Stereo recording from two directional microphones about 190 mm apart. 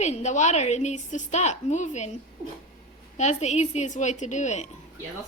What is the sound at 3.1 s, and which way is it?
A woman's voice, 35° left (ahead or behind).